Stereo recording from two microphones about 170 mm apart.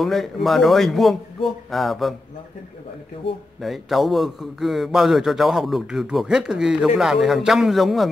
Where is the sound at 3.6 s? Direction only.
Centre (ahead or behind).